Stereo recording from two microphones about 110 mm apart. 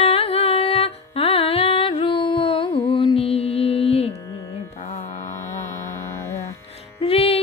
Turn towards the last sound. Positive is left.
turn(degrees=60)  # may be behind; listen again after turning